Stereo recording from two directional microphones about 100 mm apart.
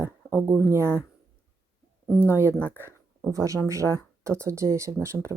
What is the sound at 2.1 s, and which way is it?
Speech, 25° right (ahead or behind).